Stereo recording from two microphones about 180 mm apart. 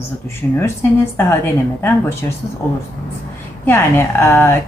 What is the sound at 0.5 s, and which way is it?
Speech, 10° left (ahead or behind).